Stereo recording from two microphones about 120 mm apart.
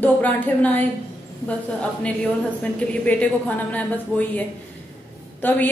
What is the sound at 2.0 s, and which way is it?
A woman's voice, 10° left (ahead or behind).